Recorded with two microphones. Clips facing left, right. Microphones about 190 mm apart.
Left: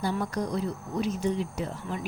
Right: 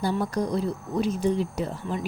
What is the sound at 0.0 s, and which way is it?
Speech, 30° right (ahead or behind).